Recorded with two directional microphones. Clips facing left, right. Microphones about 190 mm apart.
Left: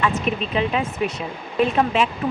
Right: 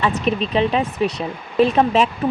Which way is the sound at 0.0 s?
35° right (ahead or behind).